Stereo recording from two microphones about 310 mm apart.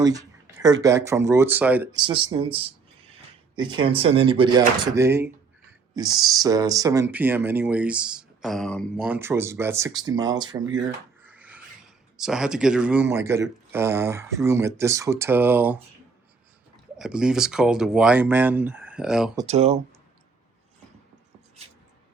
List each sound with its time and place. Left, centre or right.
0.0 s speech: centre
11.2 s filing: centre
12.2 s speech: centre
17.0 s speech: centre
19.5 s speech: right